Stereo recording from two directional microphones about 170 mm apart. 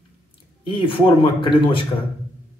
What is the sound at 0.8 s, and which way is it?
Speech, 30° left (ahead or behind).